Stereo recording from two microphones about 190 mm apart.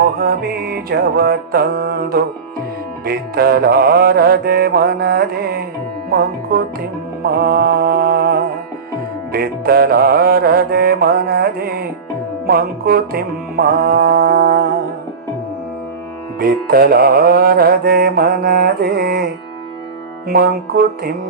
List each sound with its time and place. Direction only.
0.0 s music: 55° right (ahead or behind)
16.4 s music: 50° right (ahead or behind)